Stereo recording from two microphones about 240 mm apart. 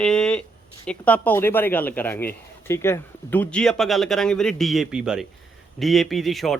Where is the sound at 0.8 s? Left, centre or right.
Centre.